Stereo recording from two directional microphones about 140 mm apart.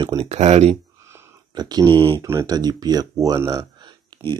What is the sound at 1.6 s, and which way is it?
Speech, 30° right (ahead or behind).